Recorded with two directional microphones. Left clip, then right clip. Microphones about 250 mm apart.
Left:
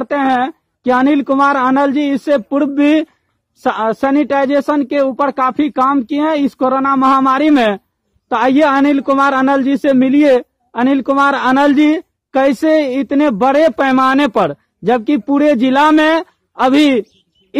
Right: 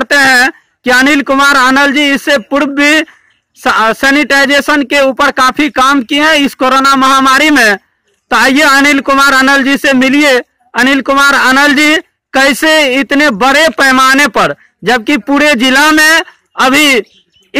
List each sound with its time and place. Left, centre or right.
0.0 s a man's voice: centre